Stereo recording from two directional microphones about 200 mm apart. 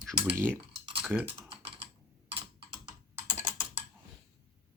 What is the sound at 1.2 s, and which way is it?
Typing, 60° right (ahead or behind).